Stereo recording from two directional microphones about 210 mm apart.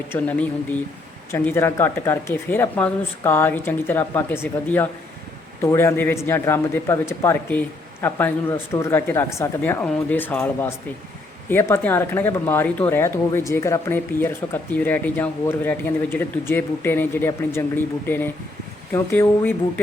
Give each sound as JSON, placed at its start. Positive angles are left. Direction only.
{"t": 0.1, "sound": "speech", "side_deg": 10}